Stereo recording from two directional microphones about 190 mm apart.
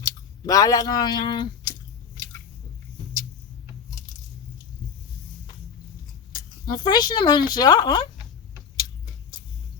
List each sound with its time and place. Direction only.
0.0 s speech: 20° left (ahead or behind)
6.3 s speech: 20° left (ahead or behind)